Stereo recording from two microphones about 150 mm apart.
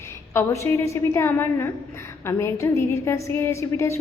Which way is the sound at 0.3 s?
15° left (ahead or behind).